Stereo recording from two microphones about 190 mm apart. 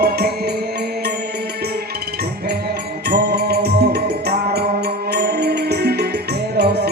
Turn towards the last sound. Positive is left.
turn(degrees=-60)  # may be behind; listen again after turning